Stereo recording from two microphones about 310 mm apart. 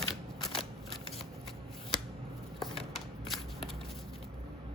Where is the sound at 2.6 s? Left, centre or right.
Centre.